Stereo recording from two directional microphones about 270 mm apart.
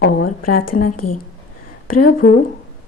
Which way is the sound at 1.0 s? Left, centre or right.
Left.